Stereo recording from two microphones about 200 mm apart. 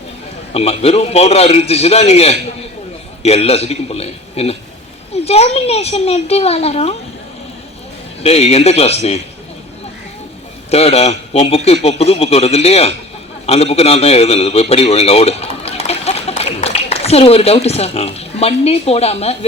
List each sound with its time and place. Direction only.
0.5 s a man's voice: 30° left (ahead or behind)
8.2 s a man's voice: 30° left (ahead or behind)
10.7 s a man's voice: 30° left (ahead or behind)